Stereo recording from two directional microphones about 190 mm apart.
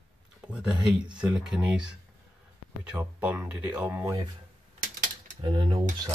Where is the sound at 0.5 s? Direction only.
5° right (ahead or behind).